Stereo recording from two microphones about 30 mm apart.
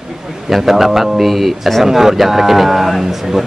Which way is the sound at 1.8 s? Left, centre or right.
Centre.